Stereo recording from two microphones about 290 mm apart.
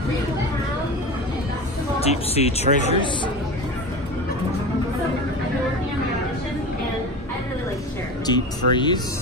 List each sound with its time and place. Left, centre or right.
2.0 s a woman's voice: left
8.3 s speech: centre